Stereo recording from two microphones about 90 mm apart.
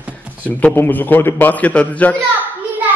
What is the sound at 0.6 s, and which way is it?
A man's voice, 20° left (ahead or behind).